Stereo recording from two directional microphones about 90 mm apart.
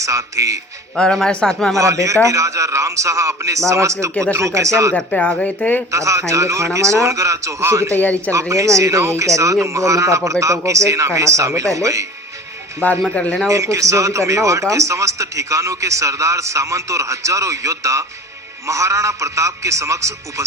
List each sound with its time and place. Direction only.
0.0 s a man's voice: 35° right (ahead or behind)
0.9 s speech: 5° left (ahead or behind)
1.8 s a man's voice: 35° right (ahead or behind)
4.9 s speech: 15° left (ahead or behind)
5.9 s a man's voice: 35° right (ahead or behind)
7.9 s speech: 15° left (ahead or behind)
8.3 s a man's voice: 35° right (ahead or behind)
12.8 s speech: 20° left (ahead or behind)
13.5 s a man's voice: 35° right (ahead or behind)